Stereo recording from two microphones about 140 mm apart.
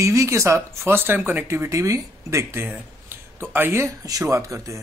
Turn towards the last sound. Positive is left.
turn(degrees=-20)  # may be behind; listen again after turning